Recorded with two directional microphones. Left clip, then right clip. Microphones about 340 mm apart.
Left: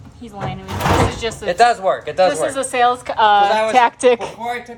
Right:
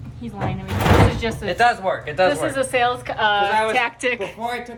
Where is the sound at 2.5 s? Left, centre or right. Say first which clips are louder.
Left 3 dB; centre.